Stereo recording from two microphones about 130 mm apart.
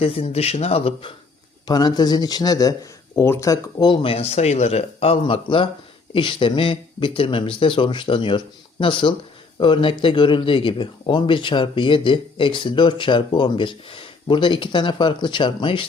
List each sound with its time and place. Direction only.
0.0 s speech: 50° left (ahead or behind)
1.6 s speech: 30° left (ahead or behind)
3.8 s speech: 50° left (ahead or behind)